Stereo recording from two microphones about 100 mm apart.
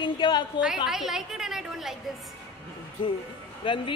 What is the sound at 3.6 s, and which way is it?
Speech, 55° left (ahead or behind).